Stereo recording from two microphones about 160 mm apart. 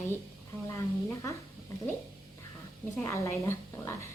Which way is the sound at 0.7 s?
20° left (ahead or behind).